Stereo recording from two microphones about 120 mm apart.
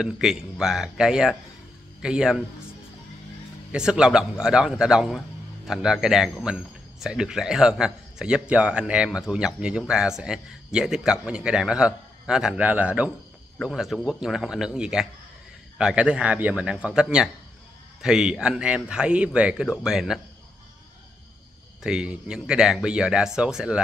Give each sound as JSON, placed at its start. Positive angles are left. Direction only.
{"t": 0.0, "sound": "a man's voice", "side_deg": -5}
{"t": 3.7, "sound": "a man's voice", "side_deg": -5}
{"t": 21.8, "sound": "a man's voice", "side_deg": -10}